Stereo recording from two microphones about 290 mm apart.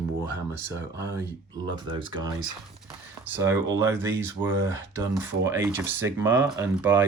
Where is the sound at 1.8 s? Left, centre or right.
Centre.